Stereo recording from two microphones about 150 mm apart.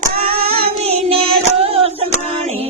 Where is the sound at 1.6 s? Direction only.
40° right (ahead or behind).